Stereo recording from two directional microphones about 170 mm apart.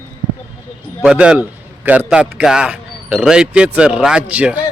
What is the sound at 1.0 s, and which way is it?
Speech, 5° right (ahead or behind).